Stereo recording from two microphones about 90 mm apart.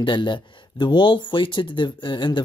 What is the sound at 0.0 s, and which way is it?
Speech, 60° left (ahead or behind).